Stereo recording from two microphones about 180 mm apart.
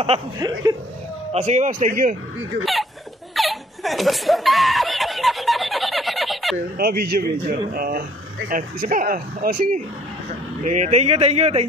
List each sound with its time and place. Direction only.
0.4 s speech: 20° right (ahead or behind)
1.3 s speech: 40° right (ahead or behind)
2.6 s hiccup: centre (ahead or behind)
3.3 s snicker: centre (ahead or behind)
6.5 s speech: 55° right (ahead or behind); by 11.6 s 35° right (ahead or behind)